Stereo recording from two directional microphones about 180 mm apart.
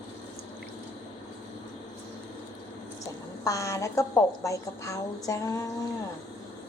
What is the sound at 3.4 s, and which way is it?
A woman's voice, 20° left (ahead or behind).